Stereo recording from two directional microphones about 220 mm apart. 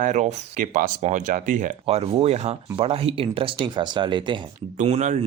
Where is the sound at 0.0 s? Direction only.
35° right (ahead or behind).